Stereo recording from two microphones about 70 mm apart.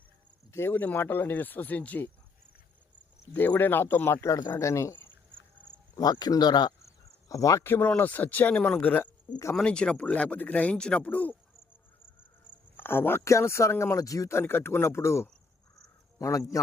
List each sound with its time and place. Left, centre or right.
0.5 s speech: left
3.3 s speech: left
4.3 s speech: left
4.6 s speech: left
6.0 s speech: left
6.8 s cricket: left
7.6 s speech: left
12.7 s speech: left
13.2 s speech: left
14.3 s a man's voice: left